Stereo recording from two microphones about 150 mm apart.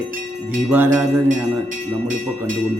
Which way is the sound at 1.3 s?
55° right (ahead or behind).